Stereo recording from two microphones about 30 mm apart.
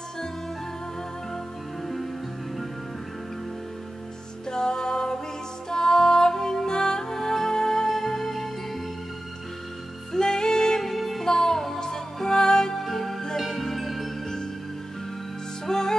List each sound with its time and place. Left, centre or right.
4.5 s music: left
10.1 s music: left
10.8 s music: centre
11.2 s music: centre
12.7 s music: centre
13.8 s music: centre
15.6 s music: centre